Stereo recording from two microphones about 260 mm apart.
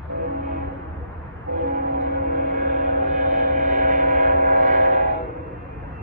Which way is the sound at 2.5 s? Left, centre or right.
Right.